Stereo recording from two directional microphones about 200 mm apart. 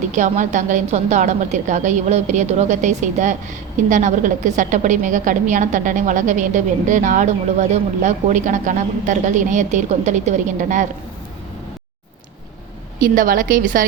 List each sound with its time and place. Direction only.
0.1 s a woman's voice: 35° right (ahead or behind)
13.0 s a woman's voice: 45° right (ahead or behind)